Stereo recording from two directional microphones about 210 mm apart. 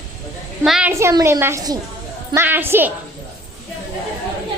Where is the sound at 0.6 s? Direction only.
Centre (ahead or behind).